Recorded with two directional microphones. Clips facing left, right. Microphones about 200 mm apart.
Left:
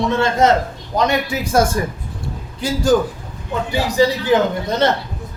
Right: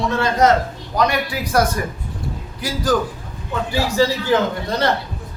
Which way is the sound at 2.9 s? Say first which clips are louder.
Left 4 dB; 25° left (ahead or behind).